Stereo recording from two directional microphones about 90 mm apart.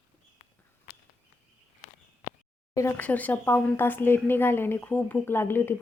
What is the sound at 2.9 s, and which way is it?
A woman's voice, 15° left (ahead or behind).